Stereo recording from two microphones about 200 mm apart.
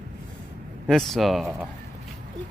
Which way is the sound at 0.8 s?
Centre (ahead or behind).